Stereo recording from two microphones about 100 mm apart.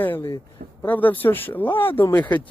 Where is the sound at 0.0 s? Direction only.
20° left (ahead or behind).